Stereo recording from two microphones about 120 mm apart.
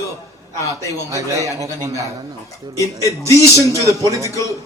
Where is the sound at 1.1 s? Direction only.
25° right (ahead or behind).